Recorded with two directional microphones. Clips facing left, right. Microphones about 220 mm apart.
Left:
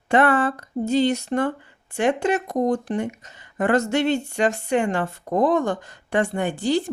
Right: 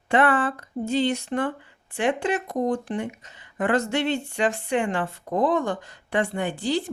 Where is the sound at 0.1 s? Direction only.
40° left (ahead or behind).